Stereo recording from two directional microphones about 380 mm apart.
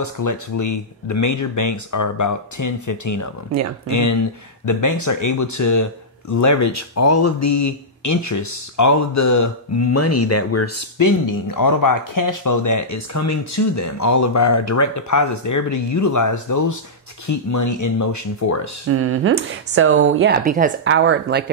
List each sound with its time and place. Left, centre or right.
0.0 s speech: left
11.0 s speech: left
18.9 s speech: right